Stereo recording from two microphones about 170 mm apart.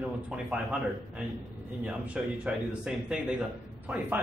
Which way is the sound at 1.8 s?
5° right (ahead or behind).